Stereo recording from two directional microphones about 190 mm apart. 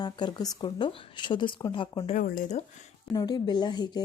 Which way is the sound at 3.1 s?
20° left (ahead or behind).